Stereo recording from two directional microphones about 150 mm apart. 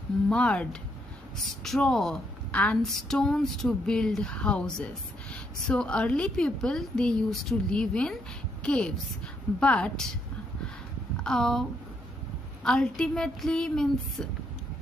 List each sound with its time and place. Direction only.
0.3 s a woman's voice: 5° left (ahead or behind)
11.1 s speech: 5° left (ahead or behind)
12.6 s a woman's voice: 5° left (ahead or behind)